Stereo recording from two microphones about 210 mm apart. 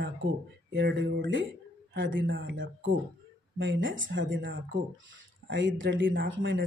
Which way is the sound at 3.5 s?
60° right (ahead or behind).